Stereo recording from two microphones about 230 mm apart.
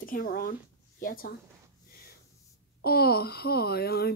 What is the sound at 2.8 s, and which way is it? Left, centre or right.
Speech, left.